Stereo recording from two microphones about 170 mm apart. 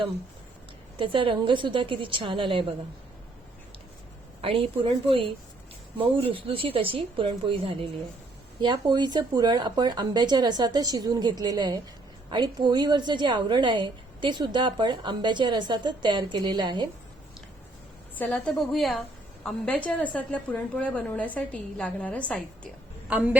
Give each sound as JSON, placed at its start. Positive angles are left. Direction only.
{"t": 0.9, "sound": "a woman's voice", "side_deg": -30}
{"t": 4.4, "sound": "a woman's voice", "side_deg": -30}
{"t": 18.1, "sound": "a woman's voice", "side_deg": 10}
{"t": 23.0, "sound": "a woman's voice", "side_deg": -10}